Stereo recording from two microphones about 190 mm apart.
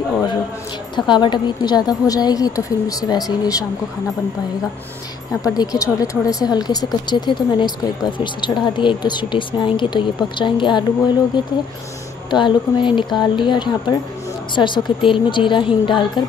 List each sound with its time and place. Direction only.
0.9 s speech: 25° left (ahead or behind)
5.4 s speech: 20° left (ahead or behind)